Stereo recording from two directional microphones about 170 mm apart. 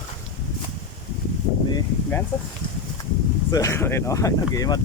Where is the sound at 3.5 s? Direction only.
20° left (ahead or behind).